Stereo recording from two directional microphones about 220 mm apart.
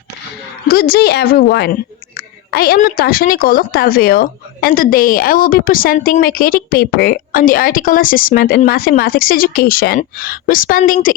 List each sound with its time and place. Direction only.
0.7 s a woman's voice: 45° left (ahead or behind)